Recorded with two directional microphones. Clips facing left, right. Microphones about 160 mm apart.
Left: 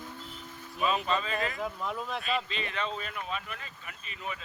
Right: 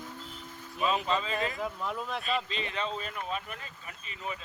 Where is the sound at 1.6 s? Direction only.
Centre (ahead or behind).